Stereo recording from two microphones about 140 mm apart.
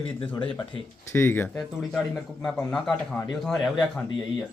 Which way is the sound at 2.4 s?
5° left (ahead or behind).